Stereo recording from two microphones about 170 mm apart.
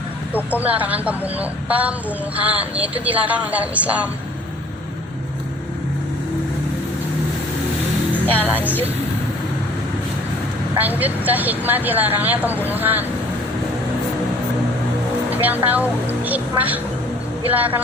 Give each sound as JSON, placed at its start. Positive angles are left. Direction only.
{"t": 0.5, "sound": "a woman's voice", "side_deg": -10}
{"t": 8.4, "sound": "a woman's voice", "side_deg": -10}
{"t": 10.8, "sound": "a woman's voice", "side_deg": -10}
{"t": 15.3, "sound": "a woman's voice", "side_deg": -10}